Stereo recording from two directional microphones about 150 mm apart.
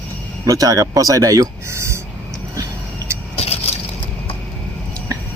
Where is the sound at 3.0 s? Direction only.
25° right (ahead or behind).